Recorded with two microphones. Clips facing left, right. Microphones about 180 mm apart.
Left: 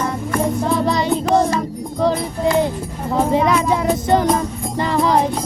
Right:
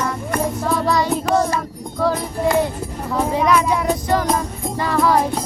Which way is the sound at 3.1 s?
25° left (ahead or behind).